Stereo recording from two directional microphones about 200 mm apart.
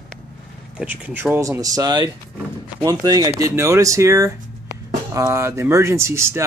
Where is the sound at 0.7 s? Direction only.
10° right (ahead or behind).